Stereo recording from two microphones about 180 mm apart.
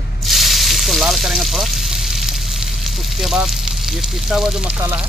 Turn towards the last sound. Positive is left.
turn(degrees=-5)  # may be behind; listen again after turning